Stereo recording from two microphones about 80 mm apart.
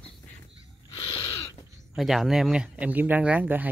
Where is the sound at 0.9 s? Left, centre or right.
Left.